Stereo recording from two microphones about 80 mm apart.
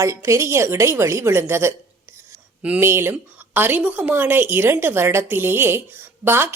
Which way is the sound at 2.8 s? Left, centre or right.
Right.